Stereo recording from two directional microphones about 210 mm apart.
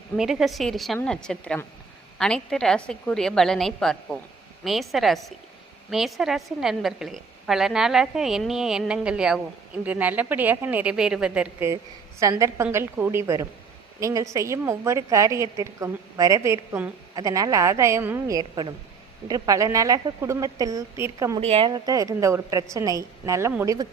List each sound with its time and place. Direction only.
0.2 s a woman's voice: centre (ahead or behind)
21.4 s a woman's voice: 25° right (ahead or behind)